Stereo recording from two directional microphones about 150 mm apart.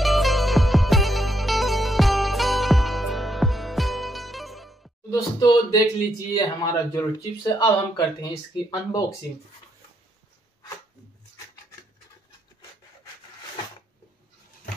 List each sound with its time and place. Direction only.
0.0 s music: centre (ahead or behind)
5.1 s a sound: 25° left (ahead or behind)
6.3 s speech: 25° left (ahead or behind)